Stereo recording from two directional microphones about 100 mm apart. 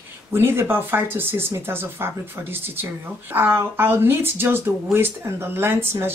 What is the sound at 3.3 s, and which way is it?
Speech, 20° right (ahead or behind).